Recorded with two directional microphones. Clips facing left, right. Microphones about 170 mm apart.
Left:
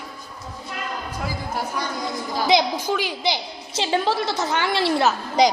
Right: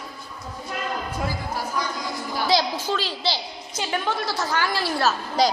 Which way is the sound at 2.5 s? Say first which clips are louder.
Left 3 dB; 15° left (ahead or behind).